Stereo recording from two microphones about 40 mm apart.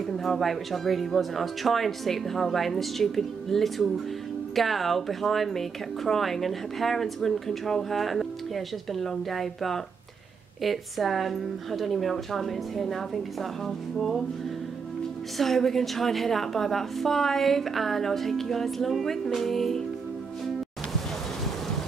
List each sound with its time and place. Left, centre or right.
0.0 s speech: centre
15.3 s speech: centre